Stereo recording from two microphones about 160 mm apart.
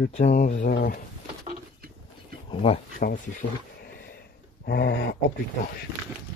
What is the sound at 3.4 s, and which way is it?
Speech, 65° left (ahead or behind).